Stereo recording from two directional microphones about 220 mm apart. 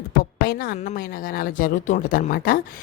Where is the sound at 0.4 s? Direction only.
45° left (ahead or behind).